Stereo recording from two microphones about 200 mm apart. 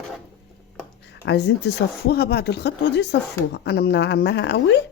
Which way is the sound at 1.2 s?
60° left (ahead or behind).